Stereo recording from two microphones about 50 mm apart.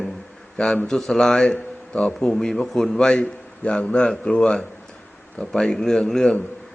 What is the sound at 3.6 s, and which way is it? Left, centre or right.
A man's voice, left.